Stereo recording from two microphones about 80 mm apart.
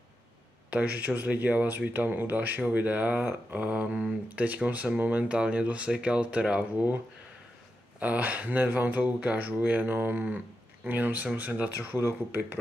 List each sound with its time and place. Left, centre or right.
0.7 s speech: centre
8.0 s speech: centre